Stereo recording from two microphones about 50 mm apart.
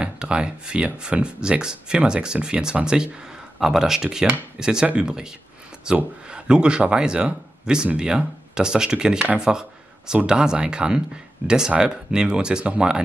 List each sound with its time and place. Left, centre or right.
0.0 s speech: right
3.5 s speech: centre